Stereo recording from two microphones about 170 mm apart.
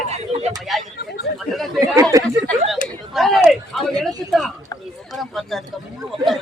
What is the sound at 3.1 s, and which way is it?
Speech, centre (ahead or behind).